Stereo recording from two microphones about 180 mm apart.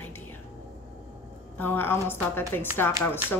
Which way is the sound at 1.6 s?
10° left (ahead or behind).